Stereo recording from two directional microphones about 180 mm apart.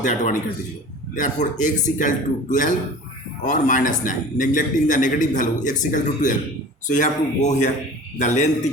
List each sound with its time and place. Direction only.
0.0 s a man's voice: 45° left (ahead or behind)